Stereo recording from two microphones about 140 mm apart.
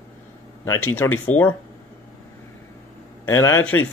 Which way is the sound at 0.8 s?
15° left (ahead or behind).